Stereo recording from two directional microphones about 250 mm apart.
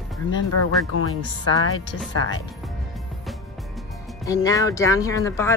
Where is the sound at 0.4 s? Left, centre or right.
Left.